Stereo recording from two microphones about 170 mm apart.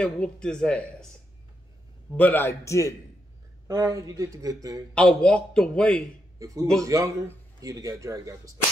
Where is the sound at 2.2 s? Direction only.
10° left (ahead or behind).